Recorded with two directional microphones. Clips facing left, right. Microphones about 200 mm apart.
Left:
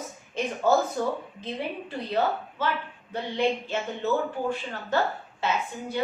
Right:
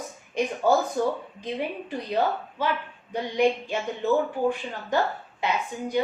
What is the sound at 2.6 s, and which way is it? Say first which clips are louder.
A woman's voice: right 2 dB; 15° right (ahead or behind).